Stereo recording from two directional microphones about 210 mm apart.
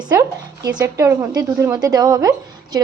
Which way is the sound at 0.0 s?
20° right (ahead or behind).